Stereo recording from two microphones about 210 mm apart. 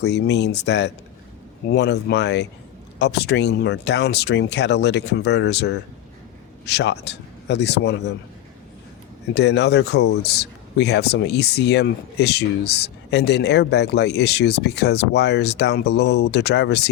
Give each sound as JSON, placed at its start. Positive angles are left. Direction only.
{"t": 0.0, "sound": "speech", "side_deg": 55}
{"t": 9.3, "sound": "speech", "side_deg": 55}